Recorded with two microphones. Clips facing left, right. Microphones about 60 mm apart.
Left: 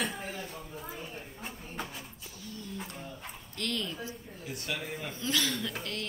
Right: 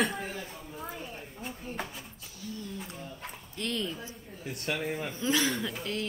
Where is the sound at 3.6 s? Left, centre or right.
Right.